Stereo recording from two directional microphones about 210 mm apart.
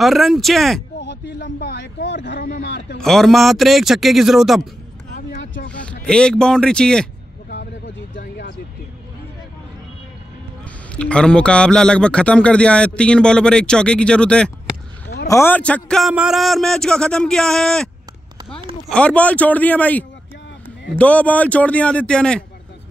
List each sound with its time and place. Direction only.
0.0 s speech: centre (ahead or behind)
1.0 s speech: 55° left (ahead or behind)
3.0 s speech: centre (ahead or behind)
5.1 s vehicle: 35° left (ahead or behind)
5.7 s a sound: 5° left (ahead or behind)
6.0 s speech: 5° left (ahead or behind)
7.4 s a sound: 60° left (ahead or behind)
11.0 s speech: 5° left (ahead or behind)
18.9 s speech: 5° left (ahead or behind)